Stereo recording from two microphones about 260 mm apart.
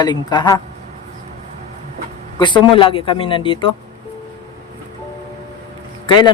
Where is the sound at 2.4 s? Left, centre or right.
Centre.